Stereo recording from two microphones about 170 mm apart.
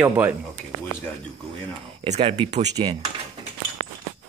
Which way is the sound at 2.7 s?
25° right (ahead or behind).